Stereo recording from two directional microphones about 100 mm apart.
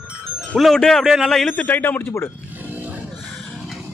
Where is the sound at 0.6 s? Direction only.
5° left (ahead or behind).